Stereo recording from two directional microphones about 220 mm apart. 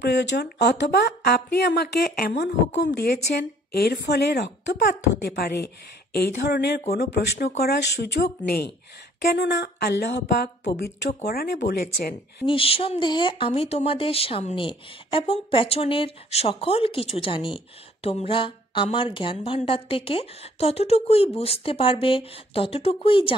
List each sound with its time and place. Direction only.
0.0 s speech: 50° left (ahead or behind)
12.4 s speech: 25° left (ahead or behind)